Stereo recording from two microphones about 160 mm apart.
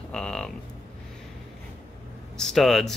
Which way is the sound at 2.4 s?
Centre (ahead or behind).